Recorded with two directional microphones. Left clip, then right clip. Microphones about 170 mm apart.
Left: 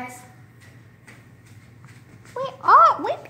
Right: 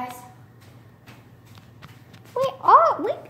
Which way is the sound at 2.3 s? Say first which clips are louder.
Even; 35° left (ahead or behind).